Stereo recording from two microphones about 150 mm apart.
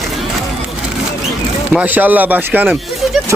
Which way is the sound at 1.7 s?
10° right (ahead or behind).